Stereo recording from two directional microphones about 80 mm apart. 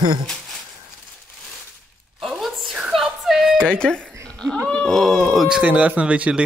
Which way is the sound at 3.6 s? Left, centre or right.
Centre.